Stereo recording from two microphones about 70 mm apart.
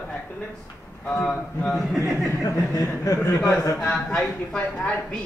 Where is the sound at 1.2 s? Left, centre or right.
Centre.